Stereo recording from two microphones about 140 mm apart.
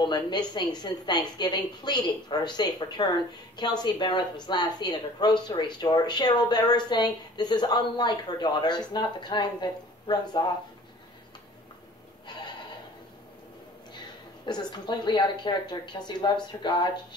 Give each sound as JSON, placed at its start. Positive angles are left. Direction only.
{"t": 0.0, "sound": "speech", "side_deg": 30}
{"t": 14.4, "sound": "speech", "side_deg": 30}